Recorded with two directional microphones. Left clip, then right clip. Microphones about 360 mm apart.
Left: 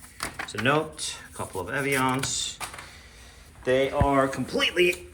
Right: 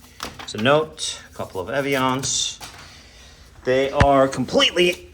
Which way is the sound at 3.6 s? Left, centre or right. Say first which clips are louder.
Right 6 dB; centre.